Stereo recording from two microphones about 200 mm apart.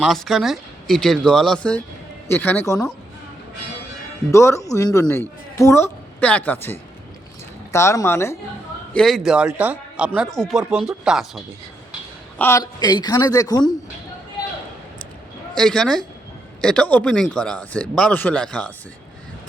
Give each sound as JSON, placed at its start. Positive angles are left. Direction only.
{"t": 0.0, "sound": "a man's voice", "side_deg": 0}
{"t": 4.3, "sound": "a woman's voice", "side_deg": 15}
{"t": 12.4, "sound": "a man's voice", "side_deg": 15}
{"t": 15.5, "sound": "a man's voice", "side_deg": 5}